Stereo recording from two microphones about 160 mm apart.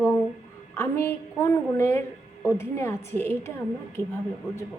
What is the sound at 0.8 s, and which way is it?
A woman's voice, 15° left (ahead or behind).